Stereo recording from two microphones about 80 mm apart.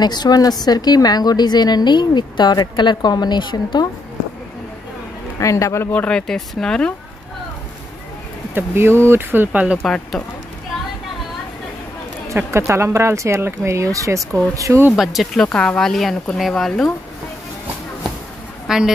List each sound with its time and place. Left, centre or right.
0.0 s a woman's voice: left
5.4 s speech: left
5.9 s speech: centre
8.5 s speech: right
9.8 s speech: centre
12.4 s speech: right
15.0 s speech: centre
15.5 s speech: centre
18.7 s a woman's voice: centre